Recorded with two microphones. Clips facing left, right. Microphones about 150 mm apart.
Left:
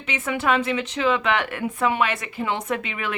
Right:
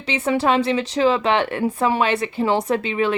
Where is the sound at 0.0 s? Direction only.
35° right (ahead or behind).